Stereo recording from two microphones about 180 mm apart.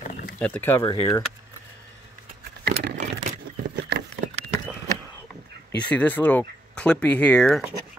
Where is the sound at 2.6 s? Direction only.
65° right (ahead or behind).